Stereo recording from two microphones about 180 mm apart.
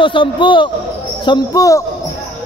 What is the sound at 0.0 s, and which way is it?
Speech, 30° left (ahead or behind).